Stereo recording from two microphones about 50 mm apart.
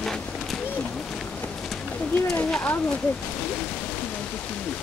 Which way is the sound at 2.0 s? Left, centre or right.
Left.